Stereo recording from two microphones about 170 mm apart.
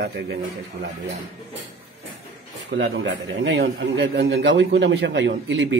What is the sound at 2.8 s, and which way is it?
A man's voice, 90° right.